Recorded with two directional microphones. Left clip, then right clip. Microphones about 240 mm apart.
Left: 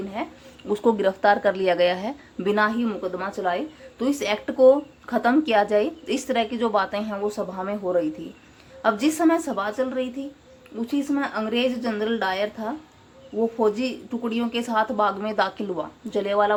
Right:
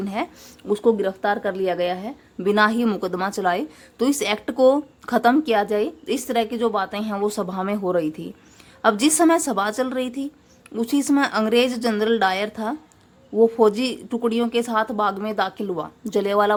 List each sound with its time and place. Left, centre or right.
0.7 s speech: centre